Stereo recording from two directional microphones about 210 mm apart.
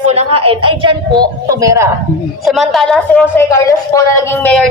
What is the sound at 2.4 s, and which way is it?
A woman's voice, centre (ahead or behind).